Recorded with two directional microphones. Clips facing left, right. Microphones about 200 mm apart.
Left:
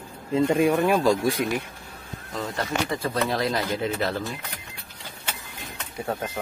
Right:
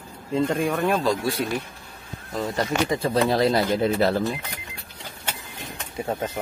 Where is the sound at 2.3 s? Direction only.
10° right (ahead or behind).